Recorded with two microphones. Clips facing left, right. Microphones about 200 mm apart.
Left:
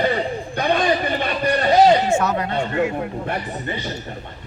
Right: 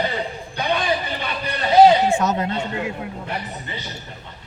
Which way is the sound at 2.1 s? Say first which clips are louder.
Left 1 dB; 20° right (ahead or behind).